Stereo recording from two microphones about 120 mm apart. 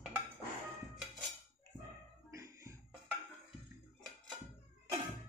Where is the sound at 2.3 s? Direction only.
25° right (ahead or behind).